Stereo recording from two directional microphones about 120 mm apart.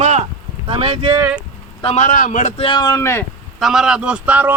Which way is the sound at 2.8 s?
25° left (ahead or behind).